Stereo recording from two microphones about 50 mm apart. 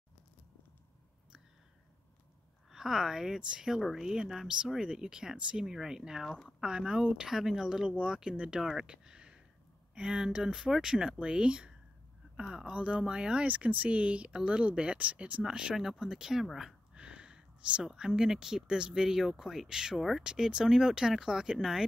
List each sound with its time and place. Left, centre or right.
2.7 s speech: centre
15.7 s speech: centre
20.2 s speech: centre